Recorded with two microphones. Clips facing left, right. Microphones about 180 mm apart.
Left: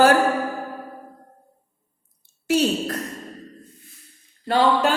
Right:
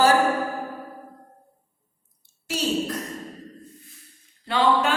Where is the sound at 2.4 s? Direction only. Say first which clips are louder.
Left 5 dB; 60° left (ahead or behind).